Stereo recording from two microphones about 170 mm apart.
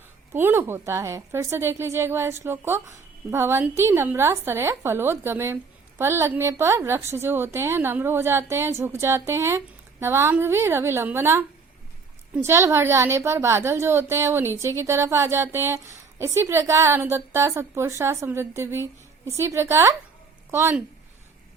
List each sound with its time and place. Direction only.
0.3 s a woman's voice: 15° right (ahead or behind)